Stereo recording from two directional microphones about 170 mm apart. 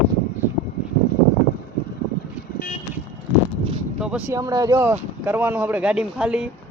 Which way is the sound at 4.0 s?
5° right (ahead or behind).